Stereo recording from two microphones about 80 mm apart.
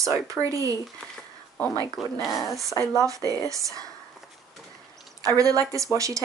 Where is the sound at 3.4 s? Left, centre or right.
Right.